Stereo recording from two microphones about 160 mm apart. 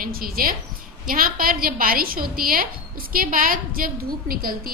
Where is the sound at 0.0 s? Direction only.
65° right (ahead or behind).